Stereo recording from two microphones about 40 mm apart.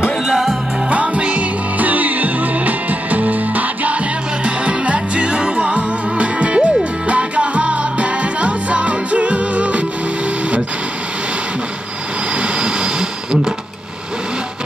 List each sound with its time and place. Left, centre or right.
0.0 s music: centre
1.1 s music: right
1.9 s music: right
4.6 s music: right
12.4 s a sound: right